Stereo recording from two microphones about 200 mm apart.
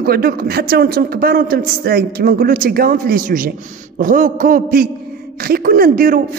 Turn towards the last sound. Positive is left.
turn(degrees=-45)  # may be behind; listen again after turning